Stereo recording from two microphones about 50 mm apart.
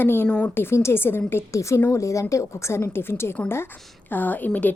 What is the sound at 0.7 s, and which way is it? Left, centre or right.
Speech, left.